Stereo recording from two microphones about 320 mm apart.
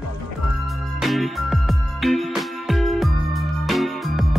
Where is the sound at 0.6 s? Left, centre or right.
Centre.